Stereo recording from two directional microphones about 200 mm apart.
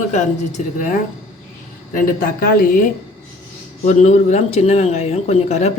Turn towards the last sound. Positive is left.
turn(degrees=35)  # may be behind; listen again after turning